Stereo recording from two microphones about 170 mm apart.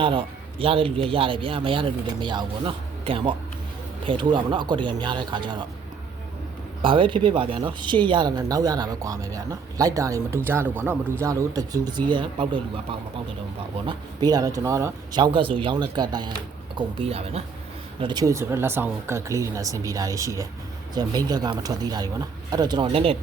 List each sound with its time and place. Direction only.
0.0 s a man's voice: 30° right (ahead or behind)
6.8 s a man's voice: 30° right (ahead or behind)
18.0 s speech: 25° right (ahead or behind)